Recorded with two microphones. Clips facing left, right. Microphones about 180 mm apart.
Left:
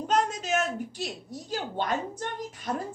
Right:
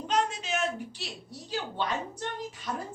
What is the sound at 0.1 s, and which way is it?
A woman's voice, 45° left (ahead or behind).